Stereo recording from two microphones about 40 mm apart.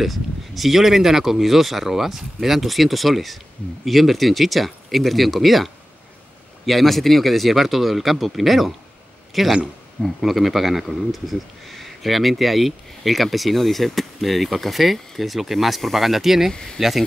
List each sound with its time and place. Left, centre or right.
0.0 s a man's voice: centre
16.5 s speech: centre